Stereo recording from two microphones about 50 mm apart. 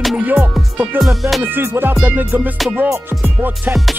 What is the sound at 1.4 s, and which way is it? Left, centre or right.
Music, right.